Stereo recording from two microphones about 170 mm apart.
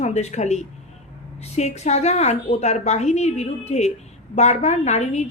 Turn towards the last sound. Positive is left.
turn(degrees=40)  # may be behind; listen again after turning